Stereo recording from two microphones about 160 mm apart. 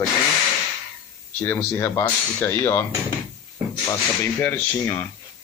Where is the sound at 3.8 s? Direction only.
10° left (ahead or behind).